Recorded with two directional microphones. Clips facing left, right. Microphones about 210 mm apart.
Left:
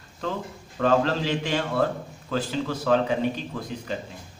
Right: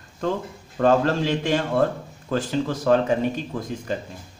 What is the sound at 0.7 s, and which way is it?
A man's voice, 45° right (ahead or behind).